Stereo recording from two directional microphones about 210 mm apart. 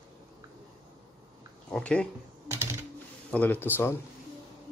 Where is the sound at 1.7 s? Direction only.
5° left (ahead or behind).